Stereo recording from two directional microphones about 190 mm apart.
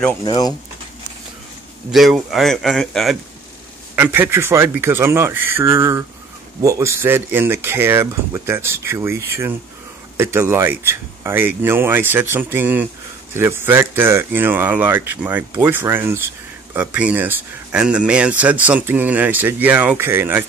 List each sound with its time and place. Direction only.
0.2 s speech: 20° left (ahead or behind)
1.9 s a man's voice: centre (ahead or behind)
3.9 s speech: 10° right (ahead or behind)